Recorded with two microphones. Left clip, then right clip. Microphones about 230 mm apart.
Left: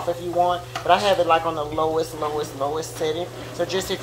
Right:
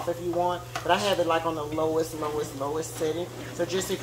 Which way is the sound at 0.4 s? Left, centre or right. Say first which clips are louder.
Left 10 dB; right.